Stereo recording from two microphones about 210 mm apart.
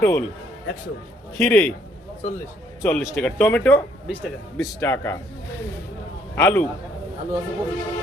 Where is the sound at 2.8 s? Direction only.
10° left (ahead or behind).